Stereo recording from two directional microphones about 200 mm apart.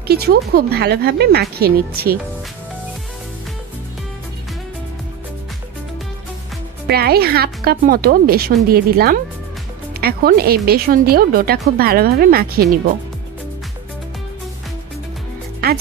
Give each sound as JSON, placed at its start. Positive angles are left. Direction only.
{"t": 0.1, "sound": "speech", "side_deg": -50}
{"t": 6.9, "sound": "speech", "side_deg": -50}